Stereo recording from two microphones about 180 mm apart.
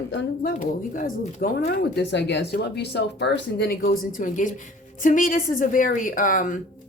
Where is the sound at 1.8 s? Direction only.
70° left (ahead or behind); by 6.5 s 45° left (ahead or behind).